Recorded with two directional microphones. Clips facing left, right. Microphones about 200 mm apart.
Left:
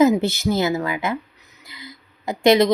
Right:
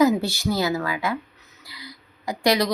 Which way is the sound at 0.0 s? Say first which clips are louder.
Left 3 dB; 20° left (ahead or behind).